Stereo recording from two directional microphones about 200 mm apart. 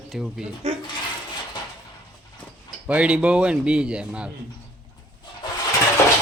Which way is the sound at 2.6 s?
5° right (ahead or behind).